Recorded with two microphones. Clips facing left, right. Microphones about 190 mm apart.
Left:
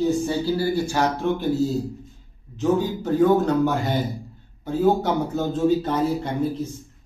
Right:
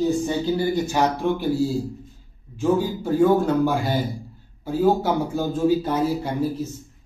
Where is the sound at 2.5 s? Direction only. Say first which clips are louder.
Even; 10° right (ahead or behind).